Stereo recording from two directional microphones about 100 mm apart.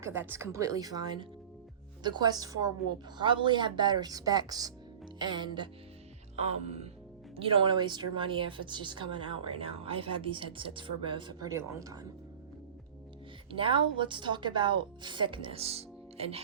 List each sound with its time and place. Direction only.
0.0 s speech: 25° right (ahead or behind)
3.2 s speech: 50° right (ahead or behind)
5.2 s speech: 50° right (ahead or behind)
6.3 s speech: 90° right
7.3 s a woman's voice: 65° right (ahead or behind)
11.4 s speech: 35° right (ahead or behind)
13.5 s a woman's voice: 60° right (ahead or behind); by 16.4 s 90° right